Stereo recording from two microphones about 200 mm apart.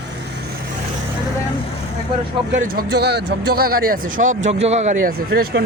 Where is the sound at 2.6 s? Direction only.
50° right (ahead or behind).